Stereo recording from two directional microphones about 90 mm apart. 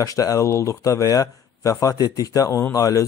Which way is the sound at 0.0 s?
40° left (ahead or behind).